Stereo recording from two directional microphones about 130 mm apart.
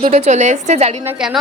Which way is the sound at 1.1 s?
5° right (ahead or behind).